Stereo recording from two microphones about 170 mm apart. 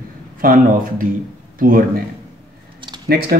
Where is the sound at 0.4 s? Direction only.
55° right (ahead or behind).